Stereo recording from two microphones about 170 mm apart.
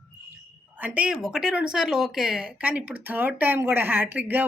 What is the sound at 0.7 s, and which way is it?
Speech, 10° right (ahead or behind).